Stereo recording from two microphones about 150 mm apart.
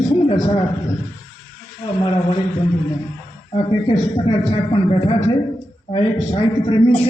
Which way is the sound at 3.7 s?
30° left (ahead or behind).